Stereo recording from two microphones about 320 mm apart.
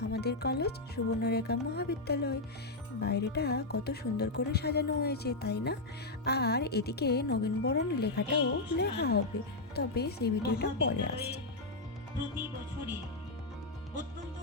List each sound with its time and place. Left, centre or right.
0.0 s a woman's voice: left